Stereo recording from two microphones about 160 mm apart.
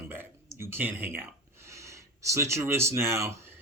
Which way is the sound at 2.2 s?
15° right (ahead or behind).